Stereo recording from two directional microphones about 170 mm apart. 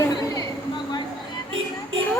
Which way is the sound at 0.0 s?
20° left (ahead or behind).